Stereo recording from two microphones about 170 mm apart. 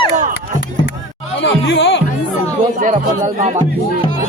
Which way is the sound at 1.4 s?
90° left.